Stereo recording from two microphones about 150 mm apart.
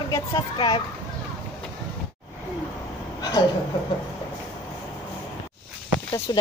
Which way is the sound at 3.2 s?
25° left (ahead or behind).